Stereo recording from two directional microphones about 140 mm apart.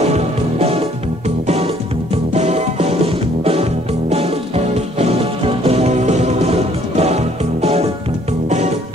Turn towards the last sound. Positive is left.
turn(degrees=-50)  # may be behind; listen again after turning